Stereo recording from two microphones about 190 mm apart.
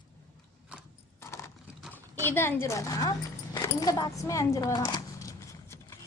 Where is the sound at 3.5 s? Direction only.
20° left (ahead or behind).